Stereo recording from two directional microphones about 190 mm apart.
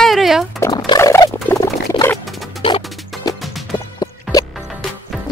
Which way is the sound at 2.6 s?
30° left (ahead or behind).